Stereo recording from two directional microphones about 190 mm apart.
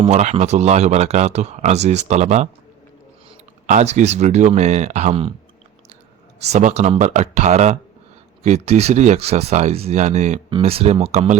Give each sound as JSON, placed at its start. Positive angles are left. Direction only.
{"t": 0.0, "sound": "speech", "side_deg": -35}
{"t": 3.7, "sound": "speech", "side_deg": -40}
{"t": 6.4, "sound": "speech", "side_deg": -35}